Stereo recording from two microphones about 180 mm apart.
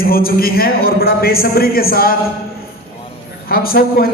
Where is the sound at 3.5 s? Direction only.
55° left (ahead or behind).